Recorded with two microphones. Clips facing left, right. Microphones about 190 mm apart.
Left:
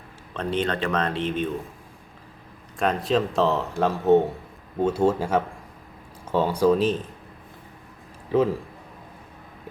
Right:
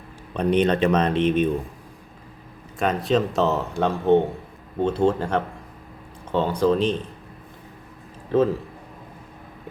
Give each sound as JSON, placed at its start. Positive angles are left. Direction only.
{"t": 0.3, "sound": "speech", "side_deg": -20}
{"t": 2.7, "sound": "speech", "side_deg": 0}
{"t": 8.3, "sound": "speech", "side_deg": 10}